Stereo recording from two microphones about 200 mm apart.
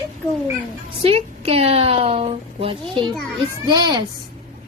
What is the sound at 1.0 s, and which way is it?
A woman's voice, 30° right (ahead or behind).